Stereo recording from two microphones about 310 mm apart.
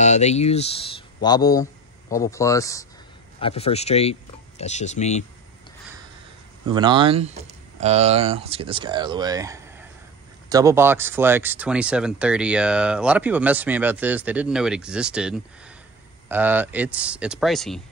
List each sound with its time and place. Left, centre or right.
0.0 s speech: left
6.7 s speech: centre